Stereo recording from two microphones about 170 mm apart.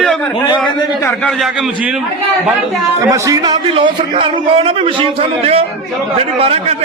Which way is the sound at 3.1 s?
20° right (ahead or behind).